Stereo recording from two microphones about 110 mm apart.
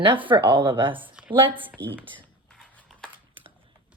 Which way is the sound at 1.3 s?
50° right (ahead or behind).